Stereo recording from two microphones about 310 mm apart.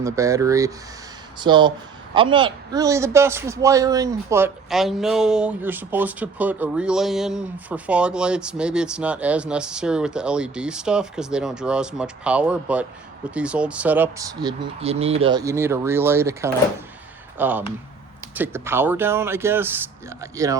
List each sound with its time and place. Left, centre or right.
0.0 s a man's voice: centre